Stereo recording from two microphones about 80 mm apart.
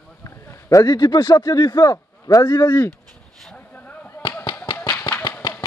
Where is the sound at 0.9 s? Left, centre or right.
Left.